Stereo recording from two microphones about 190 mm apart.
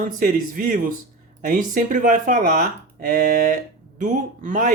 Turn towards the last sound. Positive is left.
turn(degrees=-45)  # may be behind; listen again after turning